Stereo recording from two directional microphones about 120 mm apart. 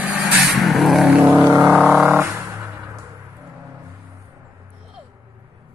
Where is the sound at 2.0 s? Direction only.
20° right (ahead or behind).